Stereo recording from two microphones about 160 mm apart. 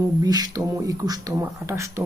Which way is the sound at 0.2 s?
25° right (ahead or behind).